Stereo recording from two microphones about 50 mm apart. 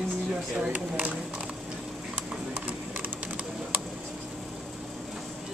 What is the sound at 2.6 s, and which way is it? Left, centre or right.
Typing, right.